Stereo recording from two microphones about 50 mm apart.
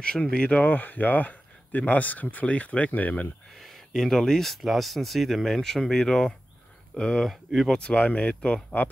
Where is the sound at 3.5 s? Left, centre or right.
Centre.